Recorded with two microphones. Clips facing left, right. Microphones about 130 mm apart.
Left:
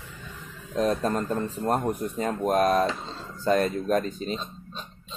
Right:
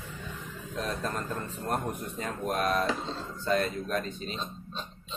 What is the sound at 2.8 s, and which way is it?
Speech, centre (ahead or behind).